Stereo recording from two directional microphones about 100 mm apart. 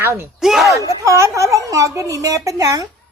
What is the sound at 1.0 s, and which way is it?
A woman's voice, 30° right (ahead or behind).